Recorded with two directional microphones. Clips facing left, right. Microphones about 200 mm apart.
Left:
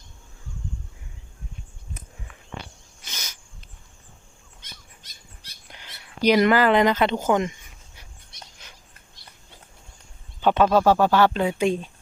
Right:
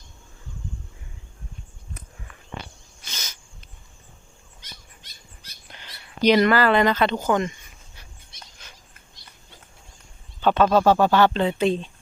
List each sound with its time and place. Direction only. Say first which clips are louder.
5.7 s speech: right 1 dB; 10° left (ahead or behind)
10.4 s a sound: even; 15° left (ahead or behind)
10.7 s speech: right 1 dB; 5° left (ahead or behind)